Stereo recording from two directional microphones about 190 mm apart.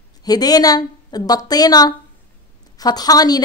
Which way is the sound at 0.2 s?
20° left (ahead or behind).